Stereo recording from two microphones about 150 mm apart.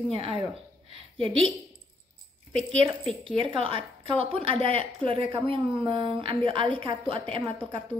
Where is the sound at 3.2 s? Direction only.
35° right (ahead or behind).